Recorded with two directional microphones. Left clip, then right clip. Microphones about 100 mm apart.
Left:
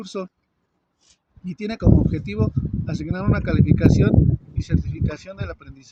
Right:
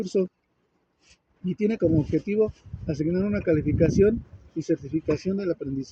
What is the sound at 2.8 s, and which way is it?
Speech, 50° left (ahead or behind).